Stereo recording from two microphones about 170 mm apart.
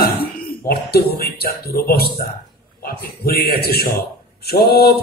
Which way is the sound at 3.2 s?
65° left (ahead or behind).